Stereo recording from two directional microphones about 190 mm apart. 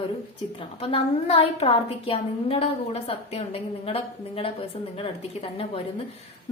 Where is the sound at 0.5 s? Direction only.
30° left (ahead or behind).